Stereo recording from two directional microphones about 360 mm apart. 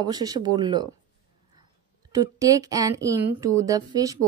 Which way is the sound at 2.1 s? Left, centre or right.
Centre.